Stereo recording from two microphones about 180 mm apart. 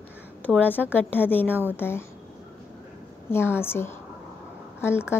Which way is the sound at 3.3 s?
15° left (ahead or behind).